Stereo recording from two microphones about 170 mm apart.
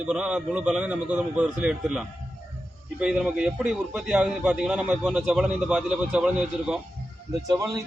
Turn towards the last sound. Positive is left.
turn(degrees=-20)  # may be behind; listen again after turning